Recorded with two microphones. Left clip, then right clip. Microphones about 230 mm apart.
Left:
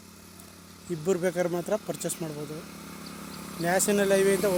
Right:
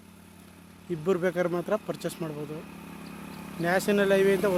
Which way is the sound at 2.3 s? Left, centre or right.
Right.